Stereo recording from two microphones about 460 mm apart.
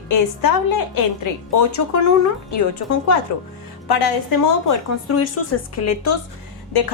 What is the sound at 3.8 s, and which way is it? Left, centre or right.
Speech, left.